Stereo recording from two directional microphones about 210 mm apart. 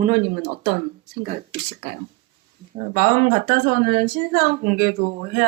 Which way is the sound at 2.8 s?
45° right (ahead or behind).